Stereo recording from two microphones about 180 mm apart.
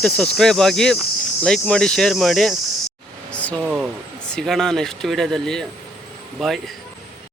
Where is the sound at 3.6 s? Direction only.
5° right (ahead or behind).